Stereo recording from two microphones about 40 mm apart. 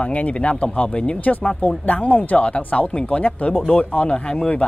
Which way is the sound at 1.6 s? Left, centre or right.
Left.